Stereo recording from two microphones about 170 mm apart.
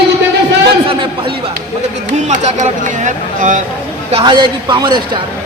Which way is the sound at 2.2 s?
45° right (ahead or behind).